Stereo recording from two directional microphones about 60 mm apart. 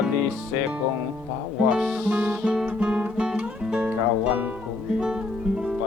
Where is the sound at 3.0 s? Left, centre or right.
Centre.